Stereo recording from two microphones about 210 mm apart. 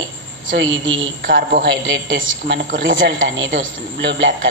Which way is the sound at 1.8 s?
60° right (ahead or behind).